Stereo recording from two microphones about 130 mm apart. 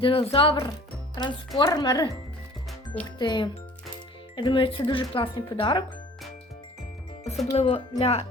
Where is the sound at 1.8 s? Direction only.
30° left (ahead or behind).